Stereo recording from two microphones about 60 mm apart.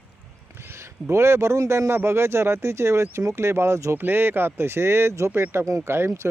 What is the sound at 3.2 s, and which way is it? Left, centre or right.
Speech, right.